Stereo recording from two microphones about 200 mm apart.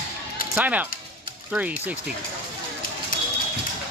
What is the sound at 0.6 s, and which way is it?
Speech, 5° right (ahead or behind).